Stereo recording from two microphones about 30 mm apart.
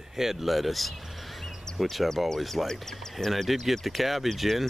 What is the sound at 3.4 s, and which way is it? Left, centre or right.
Speech, centre.